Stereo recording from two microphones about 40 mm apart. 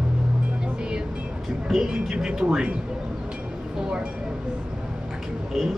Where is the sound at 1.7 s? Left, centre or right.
Centre.